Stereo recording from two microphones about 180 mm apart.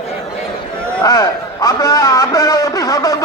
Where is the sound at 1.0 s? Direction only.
20° left (ahead or behind).